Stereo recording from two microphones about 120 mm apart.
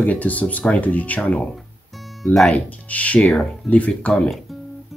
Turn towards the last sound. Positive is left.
turn(degrees=5)  # may be behind; listen again after turning